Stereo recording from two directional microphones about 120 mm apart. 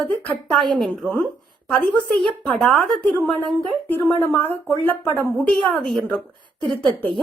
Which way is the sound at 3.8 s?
20° left (ahead or behind).